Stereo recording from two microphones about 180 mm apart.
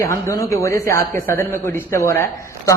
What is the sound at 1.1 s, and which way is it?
Speech, 50° right (ahead or behind).